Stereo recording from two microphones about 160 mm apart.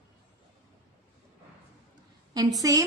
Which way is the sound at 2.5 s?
20° right (ahead or behind).